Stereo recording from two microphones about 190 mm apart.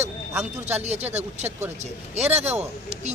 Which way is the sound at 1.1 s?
35° right (ahead or behind).